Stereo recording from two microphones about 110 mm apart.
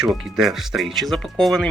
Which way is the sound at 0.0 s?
5° right (ahead or behind).